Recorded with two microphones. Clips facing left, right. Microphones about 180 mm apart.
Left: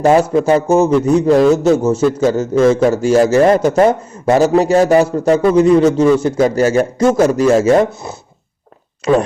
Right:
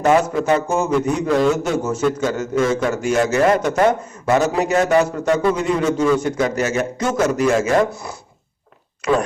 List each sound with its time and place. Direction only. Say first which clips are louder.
0.0 s a man's voice: left 5 dB; 30° left (ahead or behind)